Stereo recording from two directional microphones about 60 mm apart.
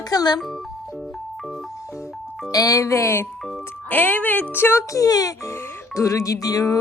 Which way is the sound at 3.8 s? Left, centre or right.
Left.